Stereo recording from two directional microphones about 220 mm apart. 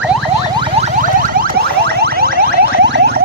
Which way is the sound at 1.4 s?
45° right (ahead or behind).